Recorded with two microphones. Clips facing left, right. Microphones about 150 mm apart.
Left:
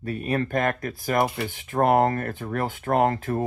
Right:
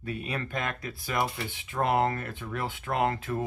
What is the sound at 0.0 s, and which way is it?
Speech, 45° left (ahead or behind).